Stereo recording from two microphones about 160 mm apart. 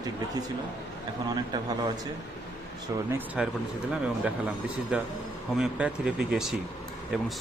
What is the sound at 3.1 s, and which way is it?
Speech, 10° right (ahead or behind).